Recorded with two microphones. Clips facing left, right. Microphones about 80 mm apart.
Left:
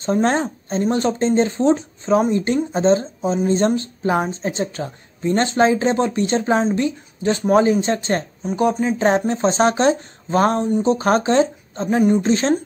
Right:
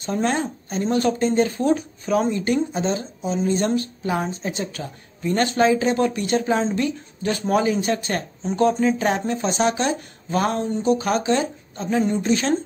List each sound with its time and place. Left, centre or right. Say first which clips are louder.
0.0 s a woman's voice: left 4 dB; left
8.4 s speech: right 3 dB; centre
8.9 s speech: left 5 dB; left
10.6 s a woman's voice: left 3 dB; left
11.0 s speech: left 5 dB; left